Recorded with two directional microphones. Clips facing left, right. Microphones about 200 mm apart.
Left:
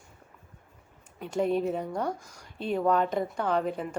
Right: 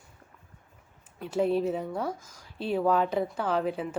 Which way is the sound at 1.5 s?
Centre (ahead or behind).